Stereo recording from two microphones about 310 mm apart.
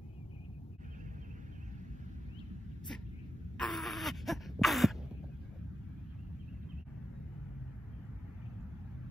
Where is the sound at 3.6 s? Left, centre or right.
Centre.